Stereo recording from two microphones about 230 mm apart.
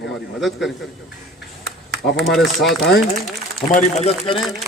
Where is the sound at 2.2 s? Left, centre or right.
Centre.